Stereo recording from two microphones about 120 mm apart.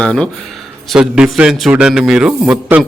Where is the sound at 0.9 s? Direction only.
5° right (ahead or behind).